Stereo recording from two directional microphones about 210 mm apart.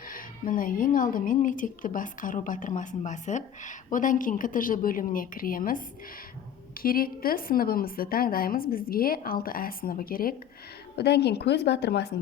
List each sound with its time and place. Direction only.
0.1 s a woman's voice: 40° left (ahead or behind)
6.8 s a woman's voice: 45° left (ahead or behind)